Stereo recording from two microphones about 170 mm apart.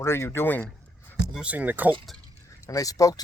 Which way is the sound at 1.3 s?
5° right (ahead or behind).